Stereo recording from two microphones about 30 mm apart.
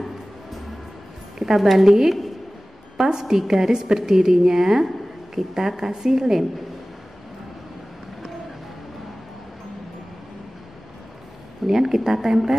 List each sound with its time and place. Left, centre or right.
1.4 s a woman's voice: centre
11.6 s a woman's voice: centre